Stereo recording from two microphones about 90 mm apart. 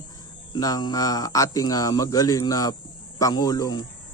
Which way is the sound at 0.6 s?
45° left (ahead or behind).